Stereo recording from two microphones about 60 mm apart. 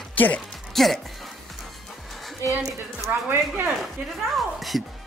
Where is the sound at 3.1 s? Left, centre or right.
Right.